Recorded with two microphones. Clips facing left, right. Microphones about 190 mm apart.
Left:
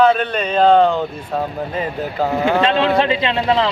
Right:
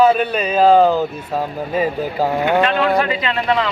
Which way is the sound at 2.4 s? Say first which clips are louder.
Left 1 dB; 25° left (ahead or behind).